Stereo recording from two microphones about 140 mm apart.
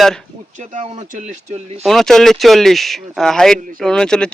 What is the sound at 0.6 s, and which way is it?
Speech, 65° right (ahead or behind).